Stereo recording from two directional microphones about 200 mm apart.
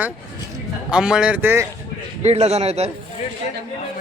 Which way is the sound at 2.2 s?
30° right (ahead or behind).